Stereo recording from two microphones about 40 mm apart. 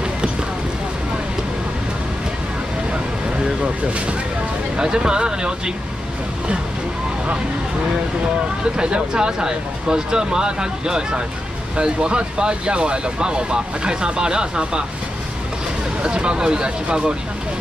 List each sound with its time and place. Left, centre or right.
4.7 s speech: centre
8.7 s speech: right
16.0 s speech: right